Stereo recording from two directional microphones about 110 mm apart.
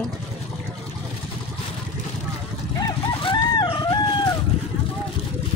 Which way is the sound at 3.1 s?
50° left (ahead or behind).